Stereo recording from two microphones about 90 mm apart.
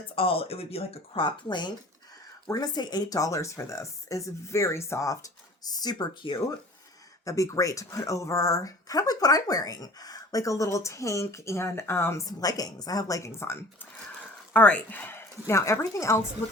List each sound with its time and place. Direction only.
0.2 s speech: 90° left; by 6.4 s 55° left (ahead or behind)
7.3 s speech: 35° left (ahead or behind)
12.2 s speech: 45° left (ahead or behind)
14.5 s speech: 15° left (ahead or behind); by 16.2 s 35° left (ahead or behind)